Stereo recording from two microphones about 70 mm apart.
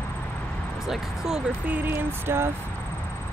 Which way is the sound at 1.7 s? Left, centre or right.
Right.